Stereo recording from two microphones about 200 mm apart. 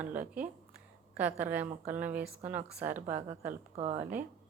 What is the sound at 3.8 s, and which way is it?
Speech, 30° right (ahead or behind).